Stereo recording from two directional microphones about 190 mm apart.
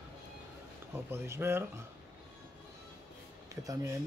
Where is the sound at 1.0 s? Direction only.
15° right (ahead or behind).